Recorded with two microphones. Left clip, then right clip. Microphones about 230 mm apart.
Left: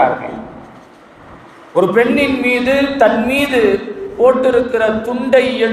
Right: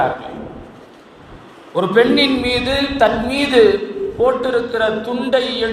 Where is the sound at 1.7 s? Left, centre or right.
Right.